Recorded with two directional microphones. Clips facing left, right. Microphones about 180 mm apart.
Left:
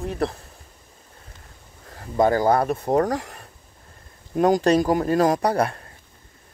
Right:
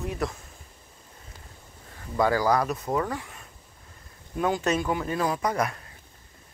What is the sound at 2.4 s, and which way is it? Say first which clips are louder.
Speech: left 4 dB; 30° left (ahead or behind).